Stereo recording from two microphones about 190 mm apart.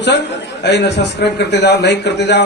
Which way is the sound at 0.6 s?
65° left (ahead or behind).